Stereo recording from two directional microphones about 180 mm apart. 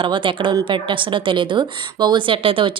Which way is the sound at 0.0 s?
25° right (ahead or behind).